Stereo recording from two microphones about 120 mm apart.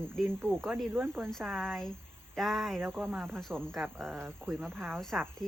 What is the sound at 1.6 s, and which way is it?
Speech, 5° left (ahead or behind).